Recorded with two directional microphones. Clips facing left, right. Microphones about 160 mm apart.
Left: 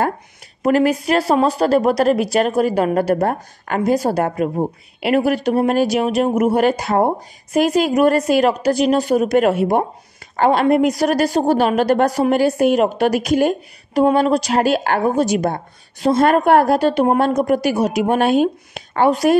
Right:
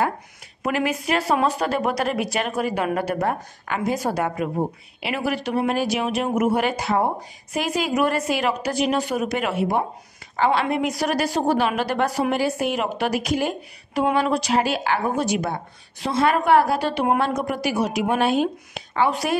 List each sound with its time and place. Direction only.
0.6 s a woman's voice: 35° left (ahead or behind)